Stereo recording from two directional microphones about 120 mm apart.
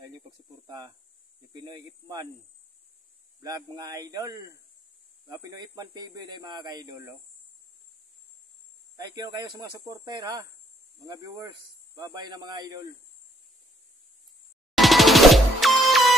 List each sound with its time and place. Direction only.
0.7 s speech: 35° right (ahead or behind)
3.4 s speech: 30° right (ahead or behind)
8.9 s speech: 35° right (ahead or behind)
14.8 s music: centre (ahead or behind)